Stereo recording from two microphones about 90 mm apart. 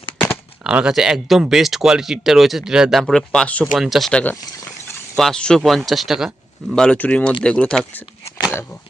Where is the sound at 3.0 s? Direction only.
5° left (ahead or behind).